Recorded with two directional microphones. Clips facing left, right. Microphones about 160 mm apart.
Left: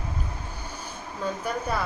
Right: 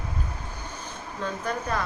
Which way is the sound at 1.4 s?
10° left (ahead or behind).